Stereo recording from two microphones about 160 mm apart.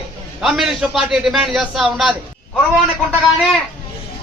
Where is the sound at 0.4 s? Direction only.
Centre (ahead or behind).